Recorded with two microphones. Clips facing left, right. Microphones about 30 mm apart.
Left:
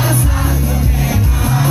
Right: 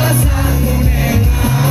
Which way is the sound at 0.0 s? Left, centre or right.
Centre.